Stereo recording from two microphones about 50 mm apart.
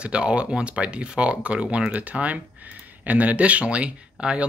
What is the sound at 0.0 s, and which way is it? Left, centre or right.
Speech, right.